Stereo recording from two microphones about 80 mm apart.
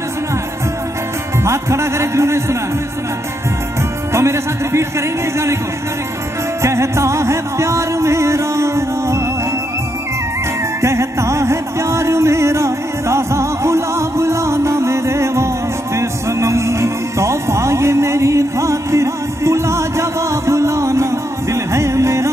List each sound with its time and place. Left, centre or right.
1.4 s music: right
4.1 s music: right
6.6 s music: right
10.8 s music: right